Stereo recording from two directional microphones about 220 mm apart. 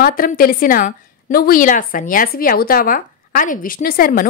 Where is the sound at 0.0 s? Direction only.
40° left (ahead or behind).